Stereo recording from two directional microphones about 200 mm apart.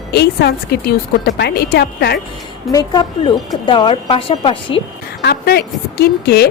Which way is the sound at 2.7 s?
20° left (ahead or behind).